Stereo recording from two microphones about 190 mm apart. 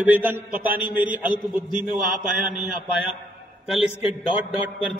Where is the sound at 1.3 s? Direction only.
45° right (ahead or behind).